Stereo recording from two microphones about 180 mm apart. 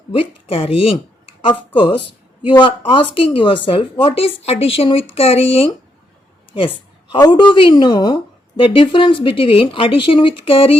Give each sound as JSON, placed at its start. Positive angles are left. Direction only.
{"t": 0.1, "sound": "a woman's voice", "side_deg": 30}